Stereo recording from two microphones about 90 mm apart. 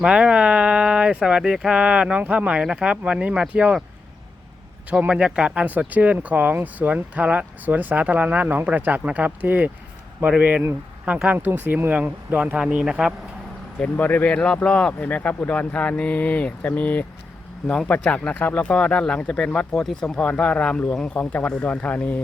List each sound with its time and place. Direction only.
0.0 s speech: 10° right (ahead or behind)
4.9 s speech: 15° right (ahead or behind)
11.0 s speech: 15° right (ahead or behind)
13.7 s speech: 15° left (ahead or behind)